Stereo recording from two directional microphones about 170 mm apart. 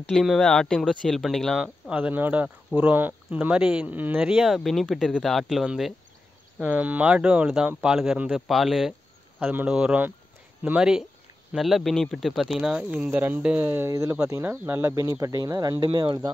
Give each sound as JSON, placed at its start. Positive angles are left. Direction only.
{"t": 0.0, "sound": "speech", "side_deg": 5}
{"t": 9.4, "sound": "speech", "side_deg": -10}